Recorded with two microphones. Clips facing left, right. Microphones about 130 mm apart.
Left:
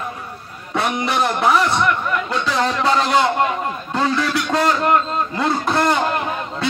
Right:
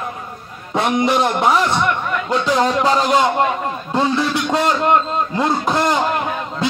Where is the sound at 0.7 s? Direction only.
30° right (ahead or behind).